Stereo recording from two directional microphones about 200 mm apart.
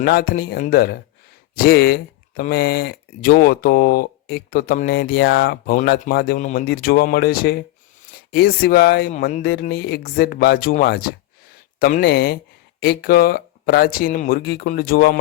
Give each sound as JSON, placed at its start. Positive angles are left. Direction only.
{"t": 0.0, "sound": "speech", "side_deg": 50}